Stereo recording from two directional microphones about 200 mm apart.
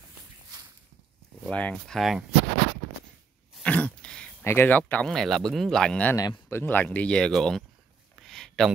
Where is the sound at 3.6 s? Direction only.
5° left (ahead or behind).